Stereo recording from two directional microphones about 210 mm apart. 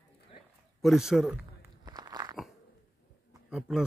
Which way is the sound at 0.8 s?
Centre (ahead or behind).